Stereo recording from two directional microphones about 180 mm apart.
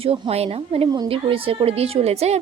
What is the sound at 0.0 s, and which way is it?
A woman's voice, 35° right (ahead or behind).